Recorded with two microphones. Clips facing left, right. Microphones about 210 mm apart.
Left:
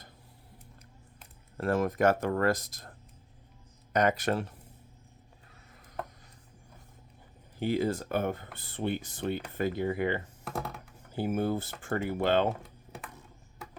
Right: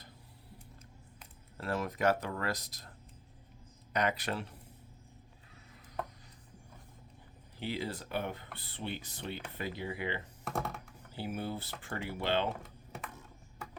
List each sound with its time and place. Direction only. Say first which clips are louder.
1.5 s speech: left 8 dB; 50° left (ahead or behind)
3.9 s speech: left 7 dB; 45° left (ahead or behind)
7.6 s speech: left 9 dB; 50° left (ahead or behind)
10.4 s speech: even; centre (ahead or behind)
11.1 s speech: left 9 dB; 50° left (ahead or behind)
12.5 s typing: even; centre (ahead or behind)